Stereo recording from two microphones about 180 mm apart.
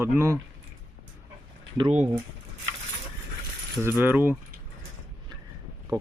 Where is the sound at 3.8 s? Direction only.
10° right (ahead or behind).